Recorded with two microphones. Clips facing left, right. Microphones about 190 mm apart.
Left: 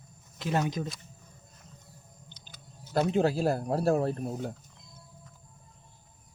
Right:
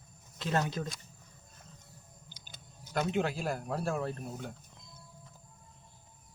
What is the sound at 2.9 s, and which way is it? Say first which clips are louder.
Speech: left 6 dB; 35° left (ahead or behind).